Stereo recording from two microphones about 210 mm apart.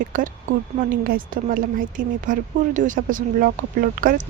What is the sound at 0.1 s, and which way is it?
Speech, 40° right (ahead or behind).